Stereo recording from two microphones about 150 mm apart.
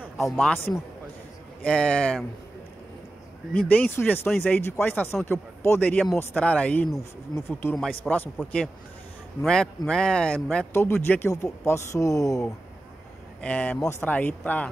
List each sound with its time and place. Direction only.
0.2 s speech: 10° left (ahead or behind)
3.5 s speech: 10° left (ahead or behind)
7.7 s speech: 5° left (ahead or behind); by 12.4 s 20° left (ahead or behind)
13.4 s speech: 10° left (ahead or behind)